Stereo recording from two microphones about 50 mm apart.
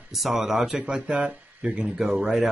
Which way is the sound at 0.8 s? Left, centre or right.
Centre.